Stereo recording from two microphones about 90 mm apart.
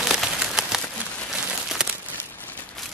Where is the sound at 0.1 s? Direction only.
Centre (ahead or behind).